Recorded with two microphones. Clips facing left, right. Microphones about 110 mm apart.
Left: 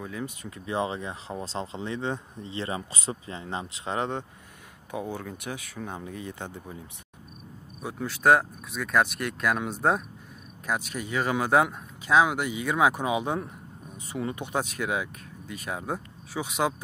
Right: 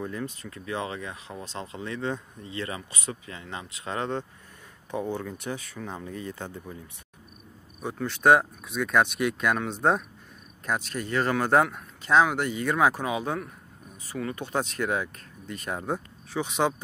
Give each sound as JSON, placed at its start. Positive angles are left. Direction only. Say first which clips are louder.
{"t": 0.2, "sound": "speech", "louder": "even", "side_deg": 15}
{"t": 0.7, "sound": "speech", "louder": "left 3 dB", "side_deg": 25}
{"t": 7.8, "sound": "speech", "louder": "right 1 dB", "side_deg": 5}